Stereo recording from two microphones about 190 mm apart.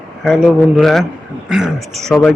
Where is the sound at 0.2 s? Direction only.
Centre (ahead or behind).